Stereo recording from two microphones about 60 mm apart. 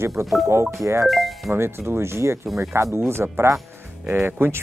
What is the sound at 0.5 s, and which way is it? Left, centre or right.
Speech, right.